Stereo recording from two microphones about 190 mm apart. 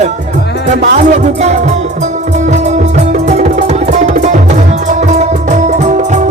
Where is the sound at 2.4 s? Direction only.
40° right (ahead or behind).